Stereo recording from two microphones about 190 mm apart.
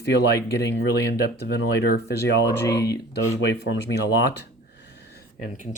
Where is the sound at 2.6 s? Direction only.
15° left (ahead or behind).